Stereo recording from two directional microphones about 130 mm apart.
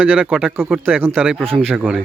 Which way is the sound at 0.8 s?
15° right (ahead or behind).